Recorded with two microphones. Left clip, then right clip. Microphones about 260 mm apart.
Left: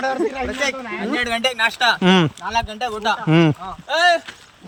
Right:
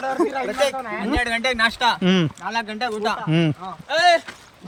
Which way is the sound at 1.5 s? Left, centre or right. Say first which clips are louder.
Left 1 dB; centre.